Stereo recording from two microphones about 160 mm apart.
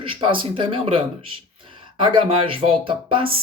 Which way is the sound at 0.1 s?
30° right (ahead or behind).